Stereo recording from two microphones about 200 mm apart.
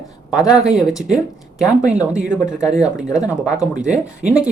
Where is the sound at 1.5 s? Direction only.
5° right (ahead or behind).